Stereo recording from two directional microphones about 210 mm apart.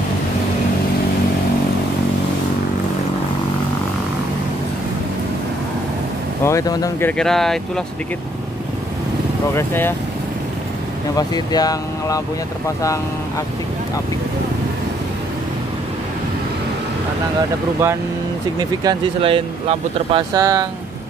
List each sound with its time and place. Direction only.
6.4 s speech: 15° left (ahead or behind)
9.6 s speech: 10° left (ahead or behind)
11.1 s speech: 20° left (ahead or behind)
18.6 s speech: 20° right (ahead or behind)